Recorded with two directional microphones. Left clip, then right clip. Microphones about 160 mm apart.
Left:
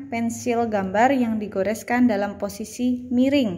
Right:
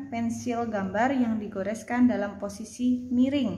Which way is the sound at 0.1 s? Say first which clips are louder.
Left 7 dB; 25° left (ahead or behind).